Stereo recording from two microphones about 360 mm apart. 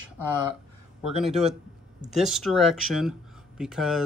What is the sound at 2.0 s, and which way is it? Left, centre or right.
Speech, centre.